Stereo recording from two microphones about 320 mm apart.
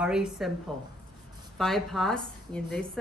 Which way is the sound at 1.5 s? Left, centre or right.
Centre.